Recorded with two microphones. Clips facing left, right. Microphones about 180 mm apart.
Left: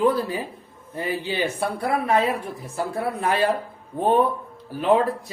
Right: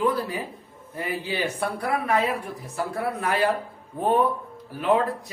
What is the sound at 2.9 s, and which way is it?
Speech, 25° left (ahead or behind).